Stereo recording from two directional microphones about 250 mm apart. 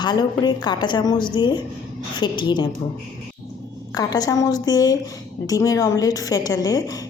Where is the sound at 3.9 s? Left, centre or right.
Centre.